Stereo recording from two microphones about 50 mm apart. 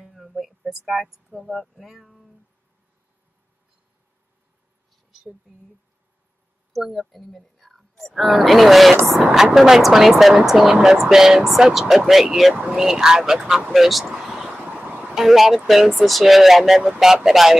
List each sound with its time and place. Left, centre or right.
0.0 s a sound: centre
6.7 s speech: centre
14.6 s music: right
15.0 s speech: centre